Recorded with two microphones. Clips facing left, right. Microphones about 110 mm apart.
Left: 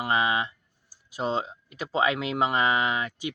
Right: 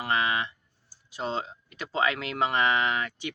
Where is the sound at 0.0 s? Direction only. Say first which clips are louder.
Left 2 dB; 15° left (ahead or behind).